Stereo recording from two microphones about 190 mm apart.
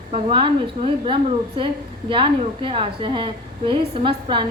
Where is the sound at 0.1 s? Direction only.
25° right (ahead or behind).